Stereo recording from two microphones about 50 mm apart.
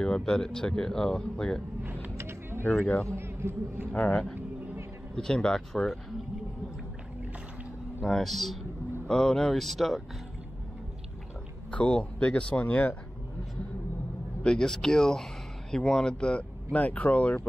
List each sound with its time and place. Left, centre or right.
0.0 s speech: centre
1.9 s vehicle: right
2.1 s a sound: right
2.8 s speech: left
3.2 s a man's voice: right
4.1 s speech: centre
8.0 s speech: centre
11.7 s speech: left
14.4 s speech: centre; by 17.4 s left